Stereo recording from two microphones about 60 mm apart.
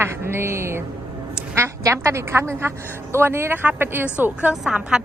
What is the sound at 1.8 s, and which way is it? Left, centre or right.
A woman's voice, right.